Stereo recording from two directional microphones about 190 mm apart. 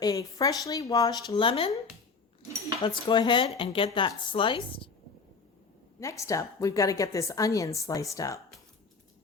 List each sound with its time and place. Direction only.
0.0 s speech: 20° left (ahead or behind)
2.8 s speech: 25° left (ahead or behind)
6.0 s a woman's voice: 15° left (ahead or behind)